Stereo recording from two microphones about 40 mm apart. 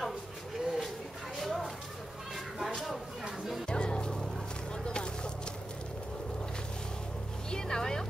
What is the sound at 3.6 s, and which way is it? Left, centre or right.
Music, left.